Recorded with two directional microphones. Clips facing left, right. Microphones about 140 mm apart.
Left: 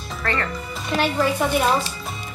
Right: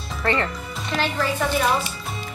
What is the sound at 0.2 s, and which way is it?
Speech, 25° right (ahead or behind).